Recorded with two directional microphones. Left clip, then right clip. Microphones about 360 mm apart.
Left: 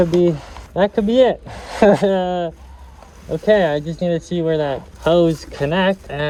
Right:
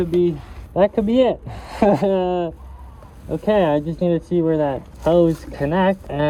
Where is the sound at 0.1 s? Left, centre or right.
Left.